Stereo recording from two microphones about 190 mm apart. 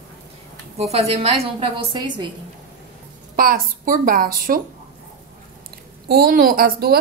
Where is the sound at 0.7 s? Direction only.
35° right (ahead or behind).